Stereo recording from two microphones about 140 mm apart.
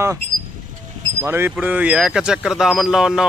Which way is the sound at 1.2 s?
15° right (ahead or behind).